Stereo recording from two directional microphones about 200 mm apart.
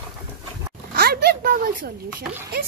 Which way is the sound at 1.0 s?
50° right (ahead or behind).